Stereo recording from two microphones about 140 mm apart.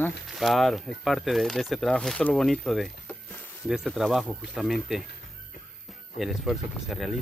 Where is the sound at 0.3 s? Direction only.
Centre (ahead or behind).